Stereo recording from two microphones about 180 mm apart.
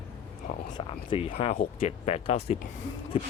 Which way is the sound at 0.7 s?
30° left (ahead or behind).